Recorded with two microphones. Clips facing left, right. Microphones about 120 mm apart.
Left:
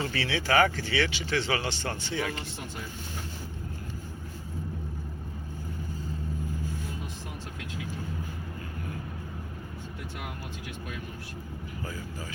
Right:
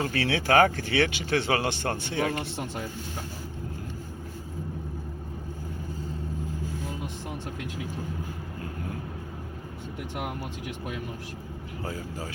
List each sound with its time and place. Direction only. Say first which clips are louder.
0.0 s speech: right 3 dB; 50° right (ahead or behind)